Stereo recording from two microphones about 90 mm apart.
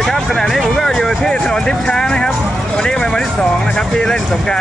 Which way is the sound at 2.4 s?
Centre (ahead or behind).